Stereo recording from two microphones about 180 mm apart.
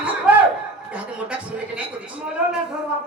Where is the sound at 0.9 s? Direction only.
5° right (ahead or behind).